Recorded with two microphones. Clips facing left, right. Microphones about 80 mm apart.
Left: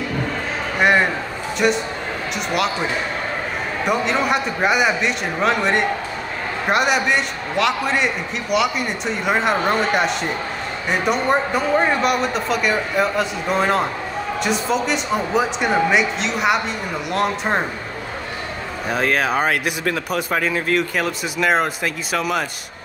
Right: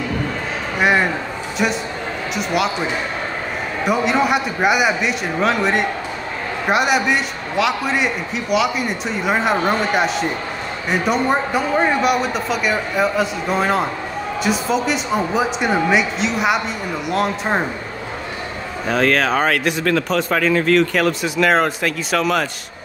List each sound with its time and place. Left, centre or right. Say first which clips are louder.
0.7 s a man's voice: even; centre
3.8 s a man's voice: right 3 dB; centre
18.9 s speech: right 3 dB; centre